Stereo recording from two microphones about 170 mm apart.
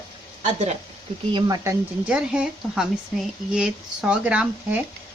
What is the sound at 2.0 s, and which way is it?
Speech, 5° right (ahead or behind).